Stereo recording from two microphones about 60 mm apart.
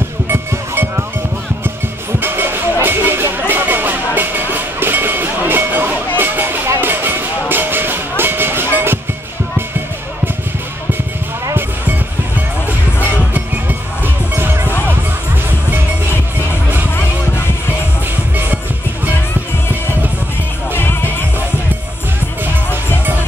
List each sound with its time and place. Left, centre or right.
0.3 s music: right
2.1 s music: right
13.3 s music: right
18.3 s music: right
20.7 s music: left